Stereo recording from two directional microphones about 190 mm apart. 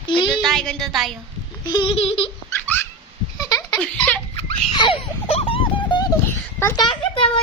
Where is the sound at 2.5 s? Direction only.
10° left (ahead or behind).